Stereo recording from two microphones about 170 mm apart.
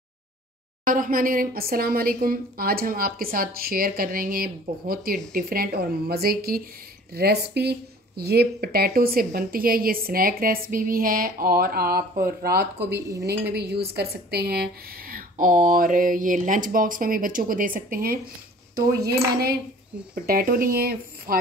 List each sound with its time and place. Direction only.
0.8 s a woman's voice: 55° right (ahead or behind); by 13.0 s 70° right (ahead or behind)
13.1 s dishes: 20° right (ahead or behind)
13.5 s a woman's voice: 75° right (ahead or behind)
20.2 s a woman's voice: 60° right (ahead or behind)